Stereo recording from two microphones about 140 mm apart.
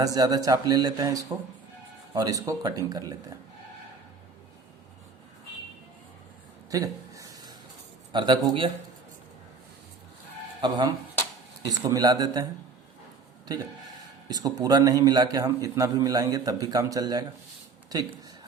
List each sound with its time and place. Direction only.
0.0 s a man's voice: 25° right (ahead or behind)
6.7 s a sound: 25° right (ahead or behind)
8.1 s a man's voice: 35° right (ahead or behind)
10.6 s a man's voice: 35° right (ahead or behind)
14.3 s a man's voice: 25° right (ahead or behind)